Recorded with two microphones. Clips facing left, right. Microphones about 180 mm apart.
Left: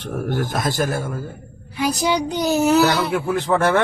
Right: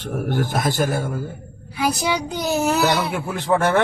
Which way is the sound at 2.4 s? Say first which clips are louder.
Left 4 dB; centre (ahead or behind).